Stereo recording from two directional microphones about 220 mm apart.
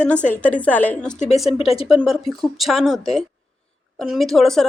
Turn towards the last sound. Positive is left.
turn(degrees=0)  # may be behind; listen again after turning